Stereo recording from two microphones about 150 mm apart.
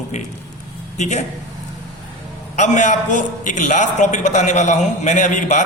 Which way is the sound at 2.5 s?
55° left (ahead or behind).